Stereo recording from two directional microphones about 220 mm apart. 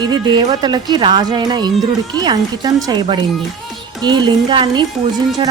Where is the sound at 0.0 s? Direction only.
20° right (ahead or behind).